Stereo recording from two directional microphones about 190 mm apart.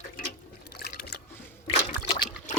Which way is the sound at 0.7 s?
55° left (ahead or behind).